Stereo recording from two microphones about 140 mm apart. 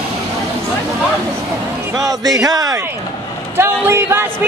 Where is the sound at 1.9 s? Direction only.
25° right (ahead or behind).